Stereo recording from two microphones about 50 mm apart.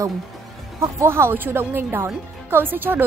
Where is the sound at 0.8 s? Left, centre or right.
Right.